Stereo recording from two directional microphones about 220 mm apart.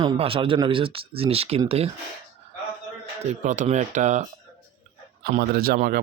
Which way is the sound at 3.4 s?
35° right (ahead or behind).